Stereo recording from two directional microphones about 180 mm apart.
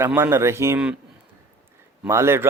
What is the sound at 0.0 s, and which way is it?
Speech, 15° right (ahead or behind).